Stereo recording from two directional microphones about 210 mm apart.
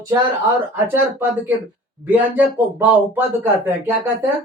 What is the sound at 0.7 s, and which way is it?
Speech, 10° right (ahead or behind).